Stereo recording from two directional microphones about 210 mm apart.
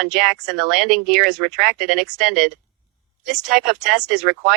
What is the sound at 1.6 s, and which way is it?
Speech, 45° right (ahead or behind).